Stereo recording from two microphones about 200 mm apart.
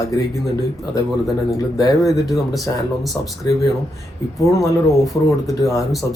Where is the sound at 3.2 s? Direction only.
15° left (ahead or behind).